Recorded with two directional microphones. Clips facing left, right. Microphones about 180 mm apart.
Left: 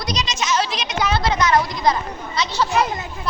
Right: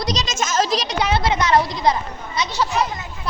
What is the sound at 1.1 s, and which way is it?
Speech, 25° right (ahead or behind).